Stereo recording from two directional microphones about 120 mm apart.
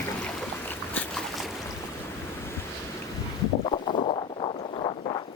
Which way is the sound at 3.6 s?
55° left (ahead or behind).